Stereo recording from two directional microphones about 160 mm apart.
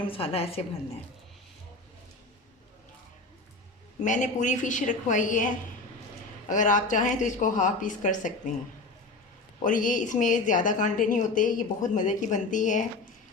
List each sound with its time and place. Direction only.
0.1 s a woman's voice: 35° left (ahead or behind)
4.0 s a woman's voice: 50° left (ahead or behind)
6.5 s a woman's voice: 50° left (ahead or behind)
9.6 s a woman's voice: 55° left (ahead or behind)